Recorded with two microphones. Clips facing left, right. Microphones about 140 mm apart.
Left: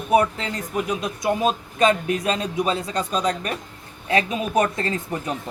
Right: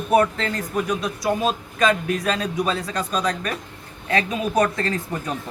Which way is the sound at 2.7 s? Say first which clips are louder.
Left 1 dB; 25° left (ahead or behind).